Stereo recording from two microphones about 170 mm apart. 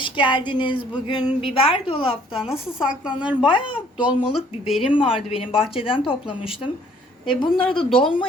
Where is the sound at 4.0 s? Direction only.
25° left (ahead or behind).